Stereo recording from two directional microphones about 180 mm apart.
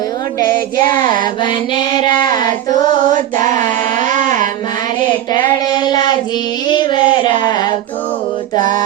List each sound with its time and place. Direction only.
0.9 s child singing: 25° left (ahead or behind)
3.4 s carnatic music: 45° right (ahead or behind)
5.7 s child singing: 25° left (ahead or behind)
8.5 s mantra: 45° right (ahead or behind)